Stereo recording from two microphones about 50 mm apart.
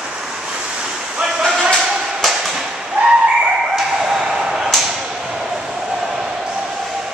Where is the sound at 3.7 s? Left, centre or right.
Centre.